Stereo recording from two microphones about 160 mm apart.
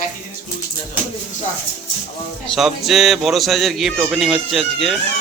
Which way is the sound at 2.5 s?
Centre (ahead or behind).